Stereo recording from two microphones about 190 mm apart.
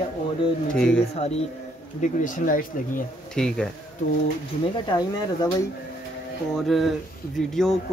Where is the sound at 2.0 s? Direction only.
45° left (ahead or behind).